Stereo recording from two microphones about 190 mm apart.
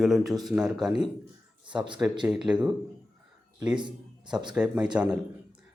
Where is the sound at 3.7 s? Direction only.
25° right (ahead or behind).